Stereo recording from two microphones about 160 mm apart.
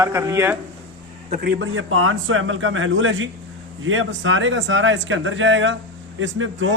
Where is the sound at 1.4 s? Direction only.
75° right (ahead or behind).